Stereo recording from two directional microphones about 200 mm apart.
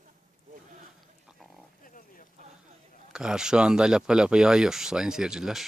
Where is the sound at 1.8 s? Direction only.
45° left (ahead or behind).